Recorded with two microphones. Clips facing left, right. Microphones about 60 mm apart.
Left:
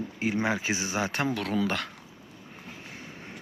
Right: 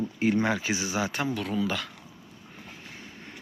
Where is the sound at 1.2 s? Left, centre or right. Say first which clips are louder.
Left 1 dB; left.